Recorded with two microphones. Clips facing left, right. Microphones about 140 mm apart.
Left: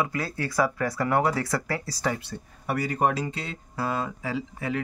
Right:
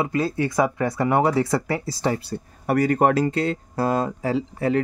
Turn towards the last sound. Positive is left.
turn(degrees=-40)  # may be behind; listen again after turning